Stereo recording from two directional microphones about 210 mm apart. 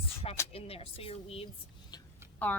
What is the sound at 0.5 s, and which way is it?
Speech, 25° left (ahead or behind).